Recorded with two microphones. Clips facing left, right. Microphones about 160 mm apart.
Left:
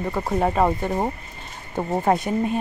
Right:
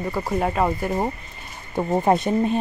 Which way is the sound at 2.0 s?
25° right (ahead or behind).